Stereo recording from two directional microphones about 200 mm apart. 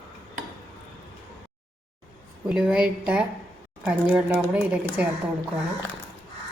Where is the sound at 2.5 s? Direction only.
5° right (ahead or behind).